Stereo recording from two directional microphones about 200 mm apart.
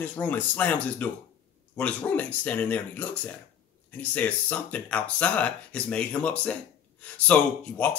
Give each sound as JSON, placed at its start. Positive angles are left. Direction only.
{"t": 0.0, "sound": "speech", "side_deg": 10}